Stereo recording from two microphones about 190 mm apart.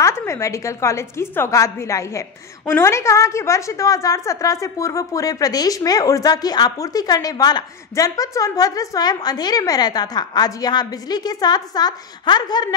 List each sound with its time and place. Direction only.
0.0 s a woman's voice: 15° left (ahead or behind)